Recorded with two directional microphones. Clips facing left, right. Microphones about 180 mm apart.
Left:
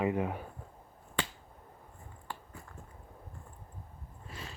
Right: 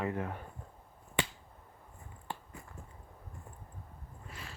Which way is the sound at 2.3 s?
20° right (ahead or behind).